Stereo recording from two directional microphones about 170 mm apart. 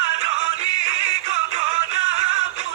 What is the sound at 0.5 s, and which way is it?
Music, 45° right (ahead or behind).